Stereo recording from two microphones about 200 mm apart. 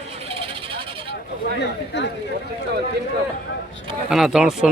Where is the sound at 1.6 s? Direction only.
60° left (ahead or behind).